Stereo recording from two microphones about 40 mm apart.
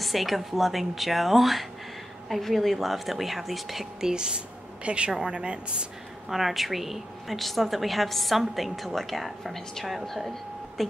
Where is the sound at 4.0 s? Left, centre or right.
Centre.